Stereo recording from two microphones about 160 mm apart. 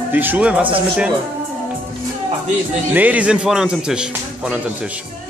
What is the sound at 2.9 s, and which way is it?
Speech, 10° right (ahead or behind).